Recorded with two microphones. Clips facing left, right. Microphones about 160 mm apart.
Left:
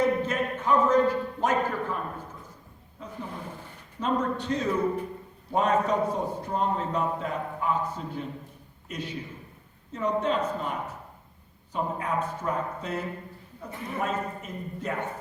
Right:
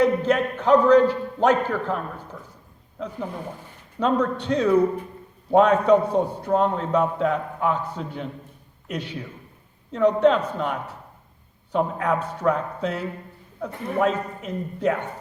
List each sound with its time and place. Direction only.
0.0 s a man's voice: 70° right (ahead or behind)
4.0 s a man's voice: 70° right (ahead or behind)